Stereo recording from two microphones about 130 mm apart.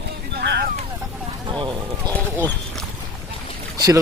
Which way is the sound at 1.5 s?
40° right (ahead or behind).